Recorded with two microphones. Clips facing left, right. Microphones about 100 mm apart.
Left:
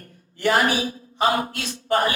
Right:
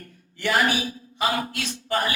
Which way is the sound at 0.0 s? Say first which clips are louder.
Left 5 dB; 40° left (ahead or behind).